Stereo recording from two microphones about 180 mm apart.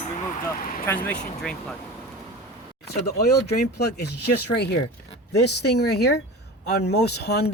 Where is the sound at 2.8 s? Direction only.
60° left (ahead or behind).